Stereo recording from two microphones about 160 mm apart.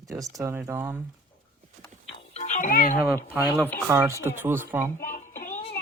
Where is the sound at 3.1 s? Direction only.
15° right (ahead or behind).